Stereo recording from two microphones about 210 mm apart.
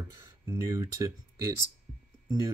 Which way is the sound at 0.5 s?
15° right (ahead or behind).